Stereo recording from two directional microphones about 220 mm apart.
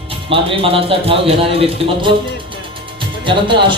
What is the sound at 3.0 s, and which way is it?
Music, 20° right (ahead or behind).